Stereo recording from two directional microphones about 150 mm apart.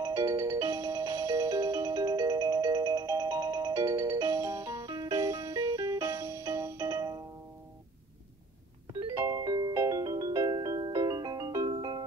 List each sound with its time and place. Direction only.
0.0 s music: 20° right (ahead or behind)
9.0 s music: 25° right (ahead or behind)